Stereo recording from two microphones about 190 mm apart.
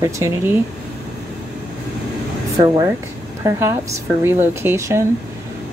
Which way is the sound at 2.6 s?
20° right (ahead or behind).